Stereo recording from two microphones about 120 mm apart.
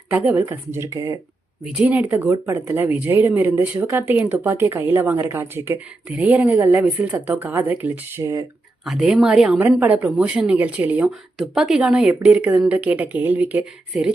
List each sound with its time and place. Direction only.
0.1 s speech: 15° right (ahead or behind)
1.6 s speech: 5° right (ahead or behind)
8.2 s speech: 25° right (ahead or behind)
8.8 s speech: 5° right (ahead or behind)